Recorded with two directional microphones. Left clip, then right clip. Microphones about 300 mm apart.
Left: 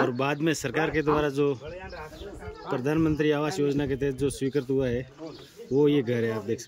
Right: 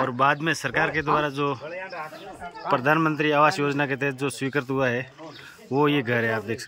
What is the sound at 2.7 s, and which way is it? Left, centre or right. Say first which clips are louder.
Speech: right 5 dB; centre.